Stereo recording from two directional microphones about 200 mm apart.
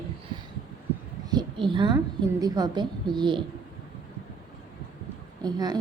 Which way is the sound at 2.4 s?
20° right (ahead or behind).